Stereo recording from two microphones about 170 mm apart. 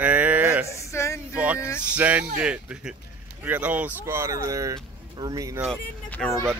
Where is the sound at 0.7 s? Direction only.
15° left (ahead or behind).